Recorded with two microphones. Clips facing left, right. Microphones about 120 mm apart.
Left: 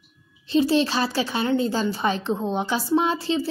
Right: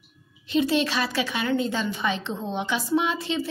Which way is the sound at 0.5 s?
30° left (ahead or behind).